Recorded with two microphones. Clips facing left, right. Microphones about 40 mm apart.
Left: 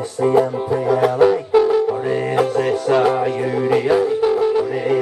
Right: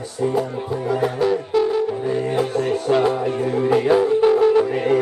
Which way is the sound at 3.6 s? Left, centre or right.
Centre.